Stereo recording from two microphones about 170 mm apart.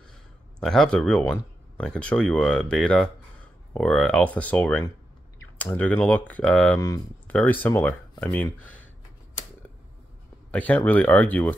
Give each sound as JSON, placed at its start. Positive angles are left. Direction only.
{"t": 0.6, "sound": "speech", "side_deg": 5}
{"t": 6.8, "sound": "speech", "side_deg": 20}
{"t": 10.5, "sound": "speech", "side_deg": 10}